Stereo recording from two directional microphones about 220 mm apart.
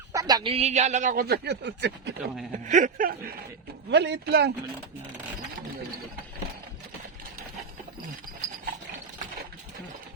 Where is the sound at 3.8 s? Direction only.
50° right (ahead or behind).